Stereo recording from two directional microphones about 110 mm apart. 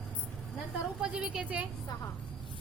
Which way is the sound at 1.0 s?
10° right (ahead or behind).